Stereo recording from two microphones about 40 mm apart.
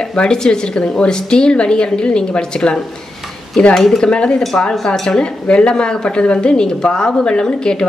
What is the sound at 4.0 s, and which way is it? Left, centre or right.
Speech, left.